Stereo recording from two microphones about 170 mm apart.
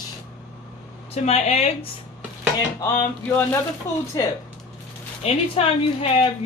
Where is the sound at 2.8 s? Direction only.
15° left (ahead or behind).